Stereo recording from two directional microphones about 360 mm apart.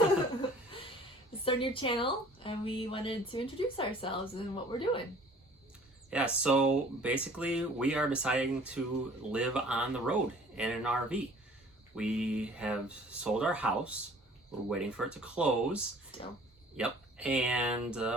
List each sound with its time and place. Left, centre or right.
1.5 s a woman's voice: centre
6.1 s speech: centre
16.1 s speech: centre
16.7 s speech: centre